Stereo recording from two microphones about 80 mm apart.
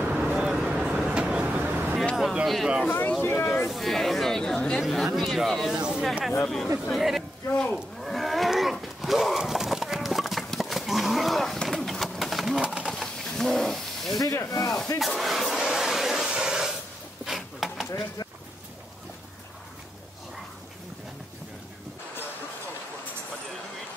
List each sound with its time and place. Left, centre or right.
0.0 s vehicle: centre
2.4 s speech: centre
3.1 s speech: left
3.6 s speech: centre
5.7 s speech: centre
6.4 s speech: centre
7.5 s livestock: centre
12.8 s a sound: centre
14.2 s speech: left
15.0 s a sound: centre